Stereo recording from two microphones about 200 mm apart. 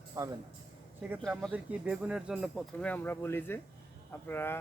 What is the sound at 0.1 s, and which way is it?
Speech, 15° right (ahead or behind).